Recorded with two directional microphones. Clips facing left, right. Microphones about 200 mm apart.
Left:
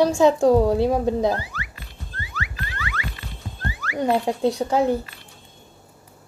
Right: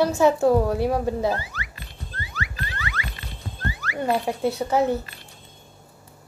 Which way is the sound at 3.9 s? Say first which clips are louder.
Left 3 dB; 15° left (ahead or behind).